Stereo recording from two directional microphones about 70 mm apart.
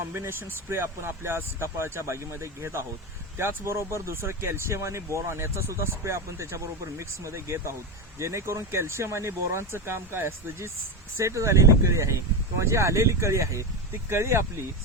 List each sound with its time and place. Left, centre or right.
0.0 s speech: right
11.2 s speech: right